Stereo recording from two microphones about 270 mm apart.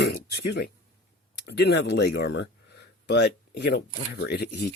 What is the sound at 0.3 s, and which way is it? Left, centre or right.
Speech, left.